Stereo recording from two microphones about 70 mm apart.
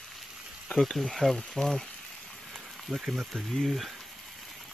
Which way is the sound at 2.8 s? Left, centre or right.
Centre.